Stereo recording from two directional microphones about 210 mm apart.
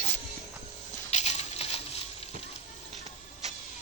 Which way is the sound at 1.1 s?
30° left (ahead or behind).